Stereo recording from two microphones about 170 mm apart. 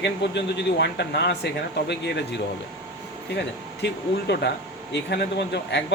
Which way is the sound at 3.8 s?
80° left.